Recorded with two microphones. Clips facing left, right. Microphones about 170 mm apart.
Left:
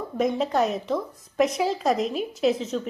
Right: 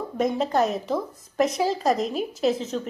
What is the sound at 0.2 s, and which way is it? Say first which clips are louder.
A woman's voice: even; centre (ahead or behind).